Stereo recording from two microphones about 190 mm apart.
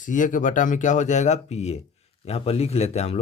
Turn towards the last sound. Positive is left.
turn(degrees=35)  # may be behind; listen again after turning